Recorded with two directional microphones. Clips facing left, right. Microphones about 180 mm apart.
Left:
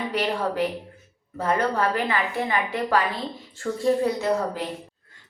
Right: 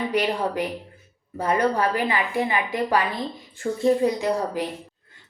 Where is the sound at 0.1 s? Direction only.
15° right (ahead or behind).